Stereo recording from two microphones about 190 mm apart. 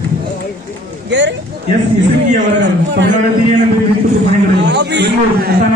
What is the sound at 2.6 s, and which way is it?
Speech, 70° right (ahead or behind).